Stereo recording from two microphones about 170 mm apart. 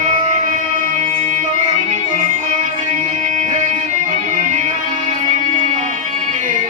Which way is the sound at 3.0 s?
45° right (ahead or behind).